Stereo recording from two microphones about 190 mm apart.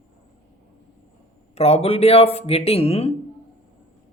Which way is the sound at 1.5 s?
35° left (ahead or behind).